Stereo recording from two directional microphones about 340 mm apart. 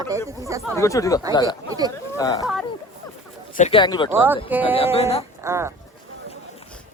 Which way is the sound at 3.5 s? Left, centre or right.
Centre.